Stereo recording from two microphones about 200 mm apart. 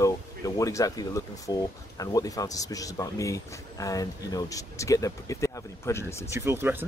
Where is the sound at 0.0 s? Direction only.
15° left (ahead or behind).